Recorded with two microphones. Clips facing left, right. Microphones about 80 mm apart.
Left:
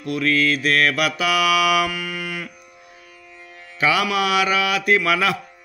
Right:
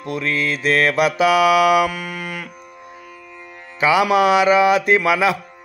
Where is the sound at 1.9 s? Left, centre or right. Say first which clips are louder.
Right 1 dB; right.